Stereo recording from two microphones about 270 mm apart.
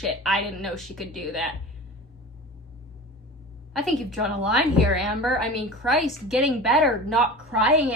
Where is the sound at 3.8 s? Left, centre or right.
Centre.